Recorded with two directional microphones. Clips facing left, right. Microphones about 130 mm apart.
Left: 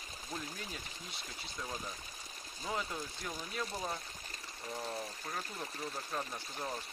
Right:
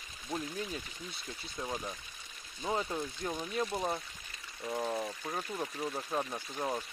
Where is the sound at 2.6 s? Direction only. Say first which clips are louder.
Right 5 dB; 25° right (ahead or behind).